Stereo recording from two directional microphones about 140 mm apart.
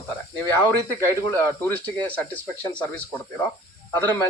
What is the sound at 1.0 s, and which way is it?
Speech, 15° left (ahead or behind).